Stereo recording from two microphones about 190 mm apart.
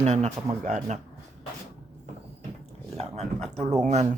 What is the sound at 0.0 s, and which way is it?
Speech, 35° right (ahead or behind).